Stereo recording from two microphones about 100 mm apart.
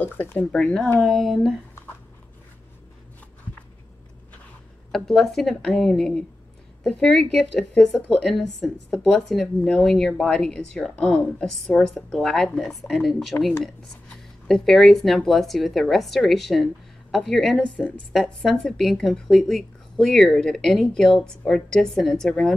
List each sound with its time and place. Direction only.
0.0 s speech: 20° left (ahead or behind)
0.5 s speech: 5° left (ahead or behind)
4.9 s speech: 5° left (ahead or behind)